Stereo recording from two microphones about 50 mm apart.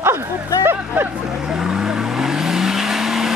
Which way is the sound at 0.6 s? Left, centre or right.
Right.